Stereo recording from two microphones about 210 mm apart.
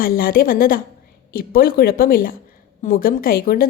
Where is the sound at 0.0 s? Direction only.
45° left (ahead or behind).